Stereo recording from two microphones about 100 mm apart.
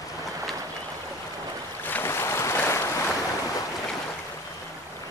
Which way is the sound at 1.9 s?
25° left (ahead or behind).